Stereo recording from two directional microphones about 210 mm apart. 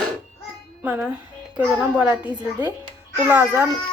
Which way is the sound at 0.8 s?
5° right (ahead or behind).